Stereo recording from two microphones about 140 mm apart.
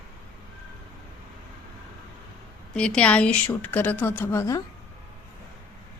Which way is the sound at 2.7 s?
5° left (ahead or behind).